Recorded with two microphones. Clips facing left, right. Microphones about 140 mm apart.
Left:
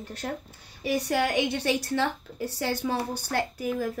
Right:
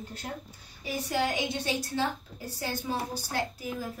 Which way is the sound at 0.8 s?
70° left (ahead or behind).